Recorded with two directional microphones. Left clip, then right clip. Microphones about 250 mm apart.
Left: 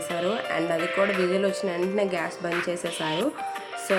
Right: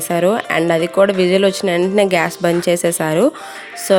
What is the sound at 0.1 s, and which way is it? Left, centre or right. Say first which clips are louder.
Speech: right 12 dB; right.